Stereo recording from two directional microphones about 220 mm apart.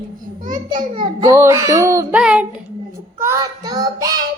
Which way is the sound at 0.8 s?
15° right (ahead or behind).